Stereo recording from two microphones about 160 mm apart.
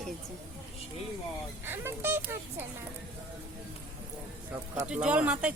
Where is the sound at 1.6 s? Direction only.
15° right (ahead or behind).